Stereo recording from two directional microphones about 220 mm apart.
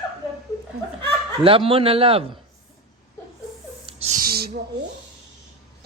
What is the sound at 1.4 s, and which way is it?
Speech, 25° right (ahead or behind).